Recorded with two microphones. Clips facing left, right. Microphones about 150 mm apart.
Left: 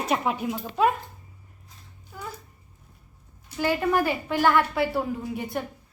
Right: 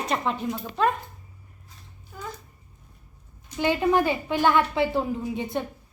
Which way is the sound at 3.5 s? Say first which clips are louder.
Right 2 dB; 20° right (ahead or behind).